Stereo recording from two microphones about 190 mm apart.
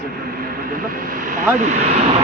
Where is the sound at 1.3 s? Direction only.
40° right (ahead or behind).